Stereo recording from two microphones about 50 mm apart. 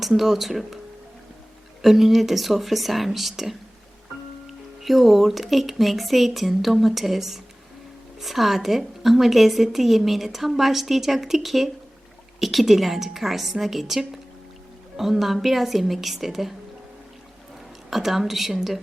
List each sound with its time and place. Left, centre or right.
0.2 s a woman's voice: centre
1.8 s a woman's voice: centre
17.9 s a woman's voice: centre